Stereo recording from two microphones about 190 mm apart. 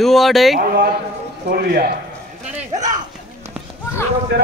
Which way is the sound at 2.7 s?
40° right (ahead or behind).